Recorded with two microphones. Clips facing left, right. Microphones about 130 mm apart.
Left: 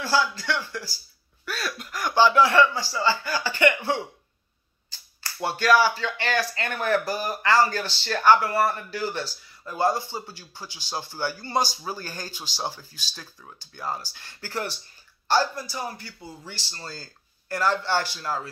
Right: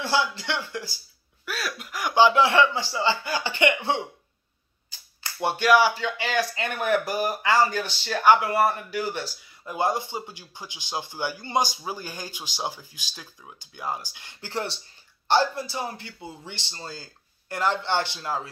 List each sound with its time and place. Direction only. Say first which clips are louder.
0.0 s speech: left 1 dB; 20° right (ahead or behind)
1.4 s speech: even; 5° right (ahead or behind); by 4.0 s 20° right (ahead or behind)
5.2 s a man's voice: right 1 dB; 20° right (ahead or behind)